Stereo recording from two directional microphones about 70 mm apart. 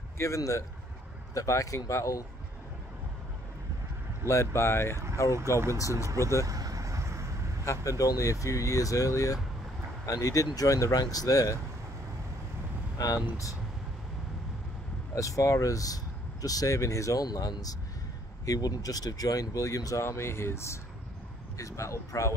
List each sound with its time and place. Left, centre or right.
0.2 s speech: left
4.3 s speech: left
5.8 s speech: left
6.0 s speech: right
6.4 s vehicle: right
7.6 s speech: left
12.9 s speech: left
15.1 s speech: left